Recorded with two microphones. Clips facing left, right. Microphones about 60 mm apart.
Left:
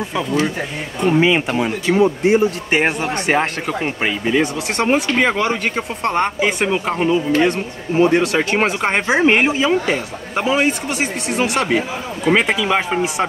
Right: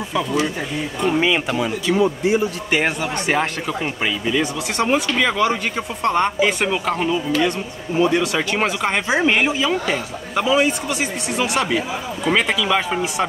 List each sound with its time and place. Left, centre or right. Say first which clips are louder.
1.0 s speech: left 4 dB; centre
1.5 s speech: left 2 dB; left
2.2 s a man's voice: left 4 dB; left
3.3 s a man's voice: left 3 dB; left
6.4 s speech: left 1 dB; centre
8.0 s speech: left 3 dB; left
8.5 s speech: left 1 dB; left
12.3 s a man's voice: left 3 dB; left